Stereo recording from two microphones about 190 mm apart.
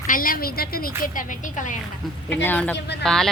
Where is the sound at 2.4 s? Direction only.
10° left (ahead or behind).